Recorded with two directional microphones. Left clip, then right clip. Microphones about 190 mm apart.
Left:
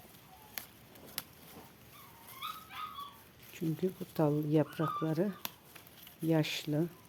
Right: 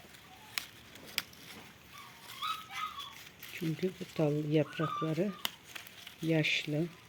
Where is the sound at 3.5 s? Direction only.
5° left (ahead or behind).